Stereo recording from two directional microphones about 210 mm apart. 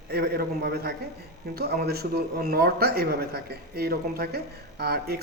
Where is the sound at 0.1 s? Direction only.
45° right (ahead or behind).